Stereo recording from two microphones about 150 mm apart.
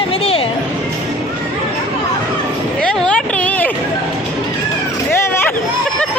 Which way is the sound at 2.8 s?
5° left (ahead or behind).